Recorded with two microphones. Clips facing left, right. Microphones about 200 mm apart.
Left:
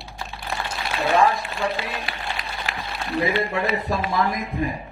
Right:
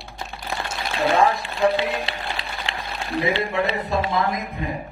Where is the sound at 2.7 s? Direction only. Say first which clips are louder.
Even; 30° right (ahead or behind).